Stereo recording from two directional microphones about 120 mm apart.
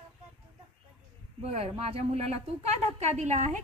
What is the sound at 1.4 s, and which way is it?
Speech, 55° right (ahead or behind).